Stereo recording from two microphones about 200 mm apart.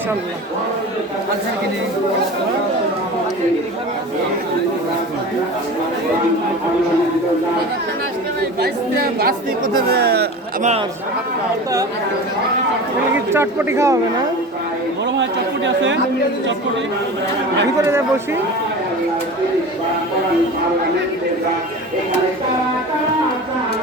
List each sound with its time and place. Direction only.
8.6 s speech: 50° right (ahead or behind)
13.3 s a man's voice: 10° right (ahead or behind)
15.1 s speech: 65° right (ahead or behind)
17.7 s a man's voice: 10° right (ahead or behind)